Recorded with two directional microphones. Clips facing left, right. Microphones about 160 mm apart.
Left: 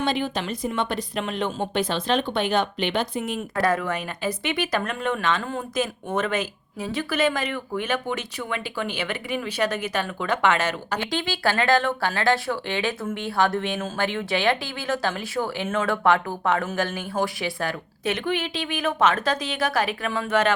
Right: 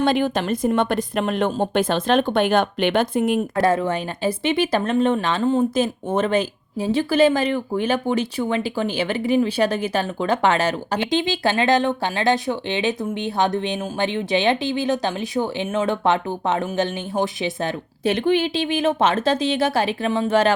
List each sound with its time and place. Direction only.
0.0 s a woman's voice: 50° right (ahead or behind)
3.6 s speech: 25° right (ahead or behind)